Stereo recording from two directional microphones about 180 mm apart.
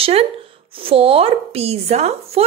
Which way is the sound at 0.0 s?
35° right (ahead or behind).